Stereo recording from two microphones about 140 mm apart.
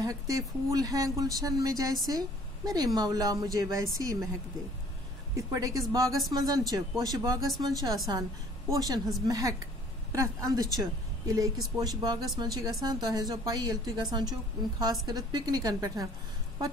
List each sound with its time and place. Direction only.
0.0 s speech: 25° right (ahead or behind)
5.3 s a woman's voice: 25° right (ahead or behind)